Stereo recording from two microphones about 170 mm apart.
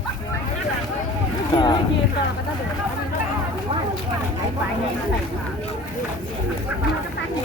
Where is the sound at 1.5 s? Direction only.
25° left (ahead or behind).